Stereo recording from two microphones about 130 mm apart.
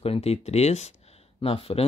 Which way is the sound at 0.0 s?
50° left (ahead or behind).